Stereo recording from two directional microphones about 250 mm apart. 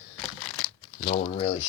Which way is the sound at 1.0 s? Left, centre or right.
Left.